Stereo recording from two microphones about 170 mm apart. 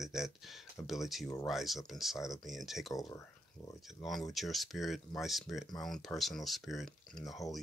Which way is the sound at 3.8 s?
Centre (ahead or behind).